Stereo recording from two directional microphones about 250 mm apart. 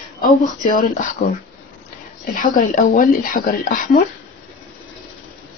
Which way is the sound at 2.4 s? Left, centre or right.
Left.